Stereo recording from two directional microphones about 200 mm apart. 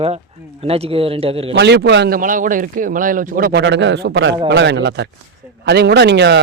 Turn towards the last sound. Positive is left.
turn(degrees=-60)  # may be behind; listen again after turning